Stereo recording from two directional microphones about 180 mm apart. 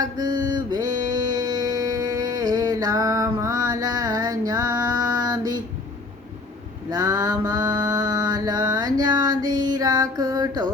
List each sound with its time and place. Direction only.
0.0 s mantra: 20° right (ahead or behind)
1.4 s music: 20° right (ahead or behind)
6.9 s mantra: 20° right (ahead or behind)
9.6 s music: 20° right (ahead or behind)